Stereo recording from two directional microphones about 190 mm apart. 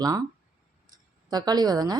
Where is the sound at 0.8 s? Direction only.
20° right (ahead or behind).